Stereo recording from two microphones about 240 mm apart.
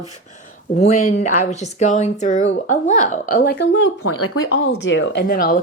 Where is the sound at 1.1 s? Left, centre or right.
Left.